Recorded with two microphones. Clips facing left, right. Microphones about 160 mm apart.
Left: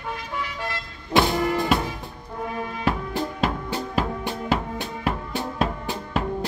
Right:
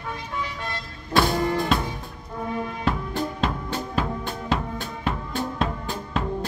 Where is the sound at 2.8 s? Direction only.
10° left (ahead or behind).